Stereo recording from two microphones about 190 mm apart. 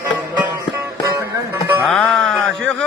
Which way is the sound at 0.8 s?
15° right (ahead or behind).